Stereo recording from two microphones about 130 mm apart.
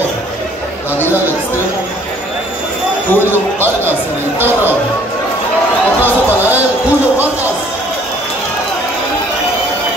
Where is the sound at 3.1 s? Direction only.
15° left (ahead or behind).